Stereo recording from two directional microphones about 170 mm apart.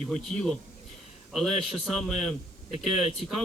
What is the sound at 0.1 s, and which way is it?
A man's voice, centre (ahead or behind).